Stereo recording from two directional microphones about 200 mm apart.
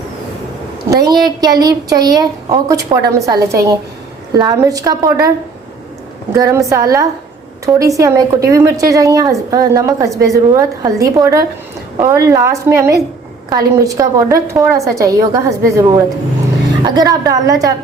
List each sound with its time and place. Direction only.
0.9 s a woman's voice: 20° right (ahead or behind)
6.3 s a woman's voice: 15° right (ahead or behind)